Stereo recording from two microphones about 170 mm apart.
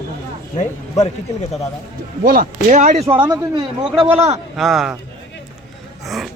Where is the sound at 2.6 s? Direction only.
45° right (ahead or behind).